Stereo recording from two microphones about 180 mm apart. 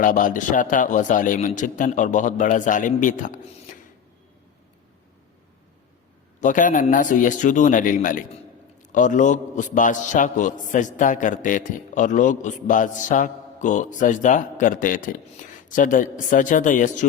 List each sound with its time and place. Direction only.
0.0 s a man's voice: 45° left (ahead or behind)
6.4 s a man's voice: 45° left (ahead or behind)